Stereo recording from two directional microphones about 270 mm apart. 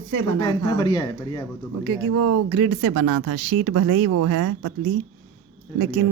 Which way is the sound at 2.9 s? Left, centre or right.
Right.